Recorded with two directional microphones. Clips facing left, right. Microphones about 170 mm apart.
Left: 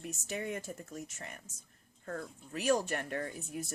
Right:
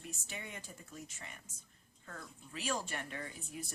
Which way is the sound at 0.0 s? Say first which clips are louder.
Left 9 dB; 45° left (ahead or behind).